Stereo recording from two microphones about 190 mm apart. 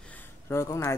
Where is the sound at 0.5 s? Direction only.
15° left (ahead or behind).